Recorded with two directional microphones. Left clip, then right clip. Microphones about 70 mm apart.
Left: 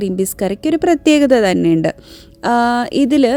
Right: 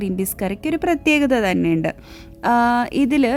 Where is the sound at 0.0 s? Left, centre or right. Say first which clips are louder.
Left 6 dB; left.